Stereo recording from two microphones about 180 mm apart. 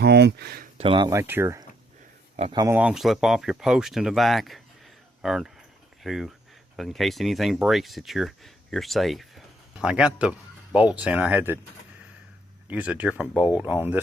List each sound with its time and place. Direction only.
0.0 s speech: 70° right (ahead or behind)
0.8 s speech: 30° right (ahead or behind)
1.2 s speech: 10° right (ahead or behind)
2.7 s speech: 5° right (ahead or behind)
12.6 s speech: 10° right (ahead or behind)
13.3 s speech: 20° left (ahead or behind)
13.7 s speech: 10° right (ahead or behind)